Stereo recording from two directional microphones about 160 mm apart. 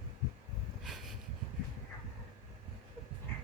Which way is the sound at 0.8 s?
Centre (ahead or behind).